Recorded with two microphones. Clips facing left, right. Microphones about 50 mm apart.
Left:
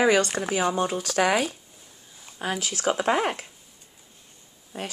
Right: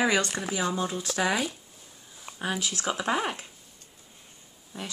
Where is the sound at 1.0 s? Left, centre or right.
Left.